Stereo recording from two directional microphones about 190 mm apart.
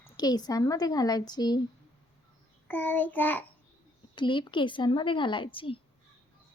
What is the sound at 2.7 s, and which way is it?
Speech, 10° left (ahead or behind).